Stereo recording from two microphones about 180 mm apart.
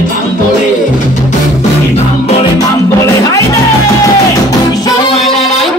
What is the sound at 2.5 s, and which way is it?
Music, 20° left (ahead or behind).